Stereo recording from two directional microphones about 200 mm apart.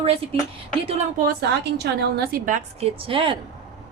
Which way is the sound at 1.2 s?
55° right (ahead or behind).